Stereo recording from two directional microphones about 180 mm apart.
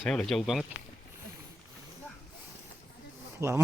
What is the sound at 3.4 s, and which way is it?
Speech, 15° right (ahead or behind).